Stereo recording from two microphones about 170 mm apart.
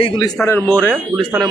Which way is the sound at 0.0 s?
25° left (ahead or behind).